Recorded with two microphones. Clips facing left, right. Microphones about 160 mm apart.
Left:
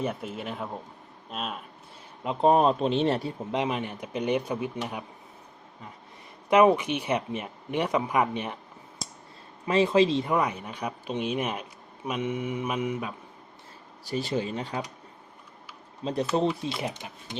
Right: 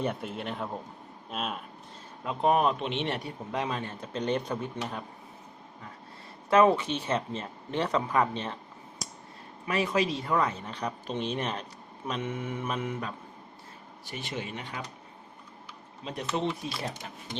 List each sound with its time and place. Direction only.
0.0 s speech: centre (ahead or behind)
2.2 s a man's voice: 30° left (ahead or behind); by 4.7 s 10° left (ahead or behind)
6.5 s speech: 15° left (ahead or behind)
9.6 s speech: 25° left (ahead or behind); by 13.1 s 10° left (ahead or behind)
14.0 s speech: 35° left (ahead or behind)
16.0 s speech: 40° left (ahead or behind)
16.6 s a man's voice: 20° left (ahead or behind)